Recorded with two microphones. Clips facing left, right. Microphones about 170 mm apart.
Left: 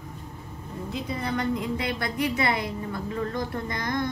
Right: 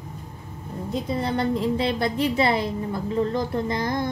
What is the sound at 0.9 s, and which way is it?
A woman's voice, 30° right (ahead or behind).